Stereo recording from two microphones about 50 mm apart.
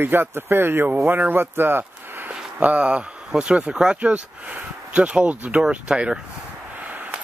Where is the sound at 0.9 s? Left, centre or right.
Right.